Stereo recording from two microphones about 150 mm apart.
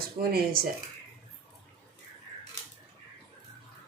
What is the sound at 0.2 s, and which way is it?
Speech, 90° right.